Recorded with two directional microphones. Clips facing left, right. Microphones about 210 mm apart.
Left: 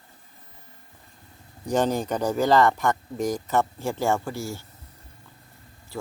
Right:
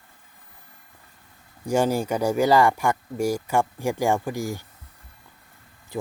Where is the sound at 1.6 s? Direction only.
10° right (ahead or behind).